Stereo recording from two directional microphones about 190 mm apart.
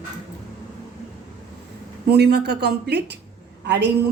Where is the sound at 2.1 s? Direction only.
60° right (ahead or behind).